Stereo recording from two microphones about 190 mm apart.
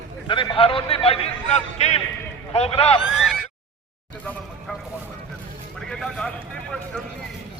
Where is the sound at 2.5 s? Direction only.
30° left (ahead or behind).